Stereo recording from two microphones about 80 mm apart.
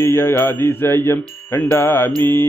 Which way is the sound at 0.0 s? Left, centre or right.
Left.